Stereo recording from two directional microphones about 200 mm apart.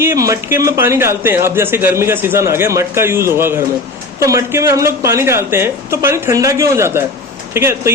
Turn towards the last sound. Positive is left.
turn(degrees=-15)  # may be behind; listen again after turning